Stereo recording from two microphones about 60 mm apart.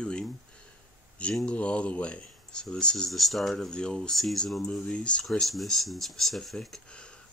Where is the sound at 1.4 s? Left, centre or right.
Centre.